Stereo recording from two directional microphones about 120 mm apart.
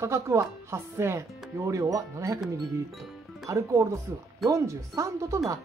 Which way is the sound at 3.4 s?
25° right (ahead or behind).